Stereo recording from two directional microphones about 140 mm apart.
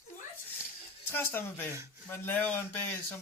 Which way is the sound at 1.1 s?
15° left (ahead or behind).